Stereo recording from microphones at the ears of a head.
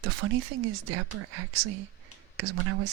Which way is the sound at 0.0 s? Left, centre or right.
Right.